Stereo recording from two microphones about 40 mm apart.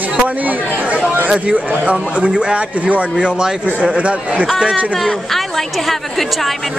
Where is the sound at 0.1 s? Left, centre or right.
Right.